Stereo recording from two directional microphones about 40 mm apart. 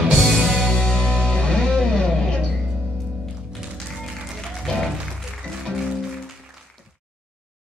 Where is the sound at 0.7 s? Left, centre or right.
Centre.